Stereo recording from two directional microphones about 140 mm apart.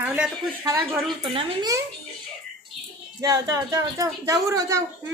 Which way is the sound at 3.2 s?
25° right (ahead or behind).